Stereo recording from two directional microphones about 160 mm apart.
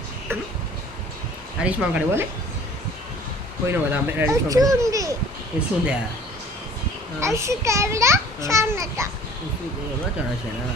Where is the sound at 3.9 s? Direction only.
15° right (ahead or behind).